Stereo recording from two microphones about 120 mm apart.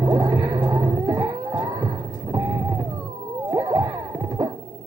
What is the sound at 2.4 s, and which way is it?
Vehicle, 15° right (ahead or behind).